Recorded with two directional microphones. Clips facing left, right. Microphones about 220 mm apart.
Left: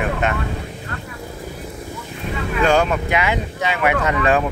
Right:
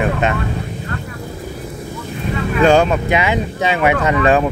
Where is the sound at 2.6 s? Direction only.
30° right (ahead or behind).